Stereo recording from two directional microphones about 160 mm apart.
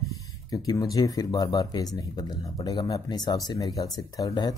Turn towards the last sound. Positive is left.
turn(degrees=25)  # may be behind; listen again after turning